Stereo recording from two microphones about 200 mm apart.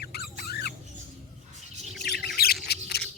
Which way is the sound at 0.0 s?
50° left (ahead or behind).